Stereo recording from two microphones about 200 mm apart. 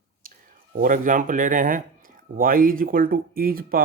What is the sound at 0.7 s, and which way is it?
Speech, 45° right (ahead or behind).